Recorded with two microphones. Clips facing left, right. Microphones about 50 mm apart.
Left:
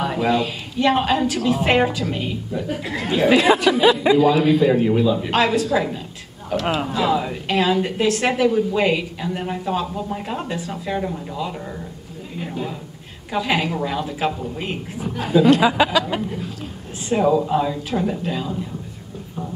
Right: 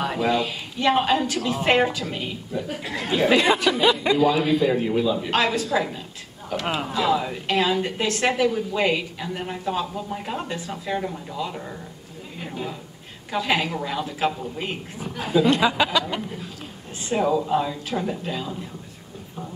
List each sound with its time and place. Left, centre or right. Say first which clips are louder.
0.0 s a woman's voice: left 3 dB; centre